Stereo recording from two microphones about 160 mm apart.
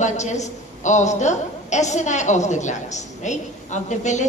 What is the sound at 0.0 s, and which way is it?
A woman's voice, 45° left (ahead or behind).